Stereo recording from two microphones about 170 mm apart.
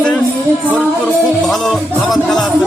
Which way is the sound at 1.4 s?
Centre (ahead or behind).